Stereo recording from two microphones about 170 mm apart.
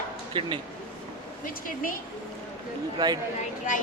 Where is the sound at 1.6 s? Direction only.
55° left (ahead or behind).